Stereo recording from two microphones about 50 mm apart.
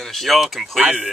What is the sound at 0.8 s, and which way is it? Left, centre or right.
Speech, right.